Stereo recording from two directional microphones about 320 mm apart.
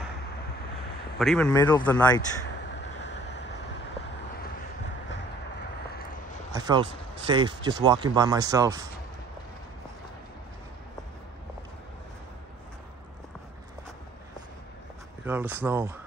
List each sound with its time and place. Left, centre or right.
1.1 s speech: centre
3.0 s vehicle: left
6.5 s speech: centre
15.2 s speech: centre